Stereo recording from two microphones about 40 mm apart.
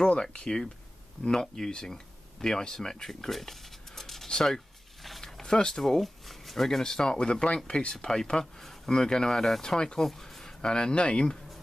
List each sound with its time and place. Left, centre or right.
0.0 s speech: left
3.3 s a sound: centre
4.3 s speech: centre